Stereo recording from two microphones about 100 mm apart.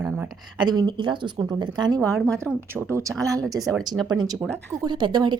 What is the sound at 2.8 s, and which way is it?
Speech, 25° right (ahead or behind).